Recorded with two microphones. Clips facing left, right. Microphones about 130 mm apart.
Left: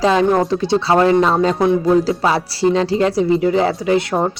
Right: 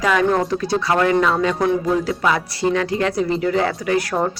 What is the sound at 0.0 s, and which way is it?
Speech, 25° left (ahead or behind).